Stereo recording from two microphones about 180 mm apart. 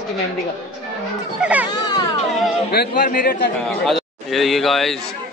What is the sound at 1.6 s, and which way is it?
Speech, 20° left (ahead or behind).